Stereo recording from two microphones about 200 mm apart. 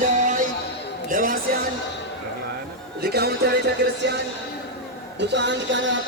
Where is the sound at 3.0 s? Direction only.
50° right (ahead or behind).